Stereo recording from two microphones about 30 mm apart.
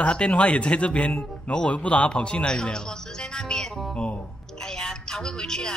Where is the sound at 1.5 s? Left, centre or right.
Left.